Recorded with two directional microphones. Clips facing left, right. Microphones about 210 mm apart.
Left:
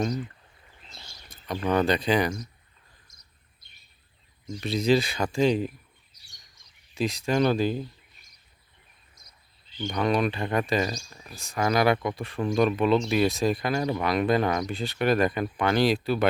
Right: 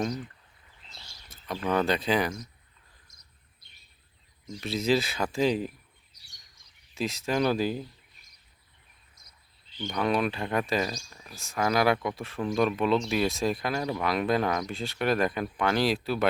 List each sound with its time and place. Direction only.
1.5 s speech: 5° right (ahead or behind)
4.6 s speech: centre (ahead or behind)
6.9 s speech: centre (ahead or behind)
9.2 s a sound: 60° right (ahead or behind)
9.7 s speech: centre (ahead or behind)